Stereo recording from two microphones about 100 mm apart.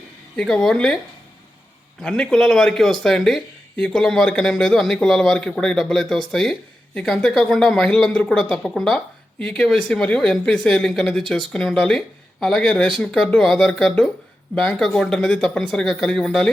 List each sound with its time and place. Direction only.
0.3 s speech: 5° left (ahead or behind)
2.0 s speech: 10° left (ahead or behind)